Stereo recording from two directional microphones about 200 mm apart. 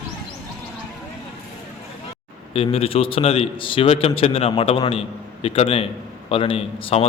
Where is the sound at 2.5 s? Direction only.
30° left (ahead or behind).